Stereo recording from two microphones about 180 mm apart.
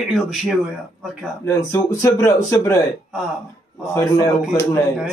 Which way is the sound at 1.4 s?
15° left (ahead or behind).